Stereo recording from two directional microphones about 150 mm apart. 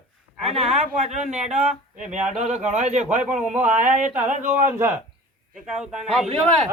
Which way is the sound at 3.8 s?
60° right (ahead or behind).